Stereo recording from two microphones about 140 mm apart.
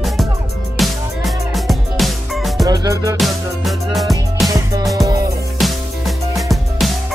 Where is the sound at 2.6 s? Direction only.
25° right (ahead or behind).